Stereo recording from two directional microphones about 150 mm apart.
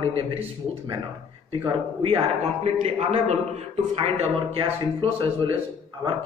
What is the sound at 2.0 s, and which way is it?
A man's voice, 40° right (ahead or behind).